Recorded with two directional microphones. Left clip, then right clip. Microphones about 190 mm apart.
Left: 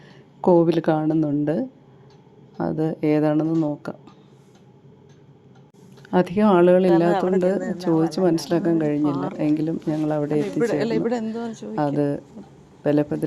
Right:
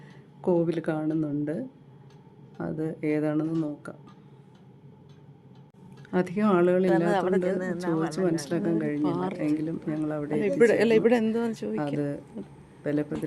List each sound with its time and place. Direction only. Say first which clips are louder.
0.4 s speech: left 9 dB; 20° left (ahead or behind)
6.1 s speech: left 7 dB; 20° left (ahead or behind)
7.1 s speech: left 4 dB; centre (ahead or behind)
7.3 s speech: left 6 dB; 10° left (ahead or behind)
8.1 s speech: left 7 dB; 20° left (ahead or behind)
10.3 s speech: right 5 dB; 30° right (ahead or behind)
11.9 s speech: left 8 dB; 15° left (ahead or behind)